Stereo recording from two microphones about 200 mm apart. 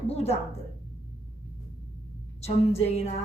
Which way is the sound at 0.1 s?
30° left (ahead or behind).